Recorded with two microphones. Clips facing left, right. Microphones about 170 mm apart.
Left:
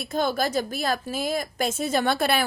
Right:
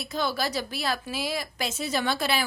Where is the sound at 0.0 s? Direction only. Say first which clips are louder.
Left 4 dB; 50° left (ahead or behind).